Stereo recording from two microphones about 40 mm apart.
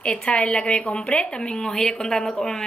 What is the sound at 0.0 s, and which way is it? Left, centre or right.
Speech, left.